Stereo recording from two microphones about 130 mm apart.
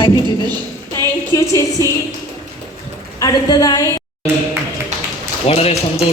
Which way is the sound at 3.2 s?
30° left (ahead or behind).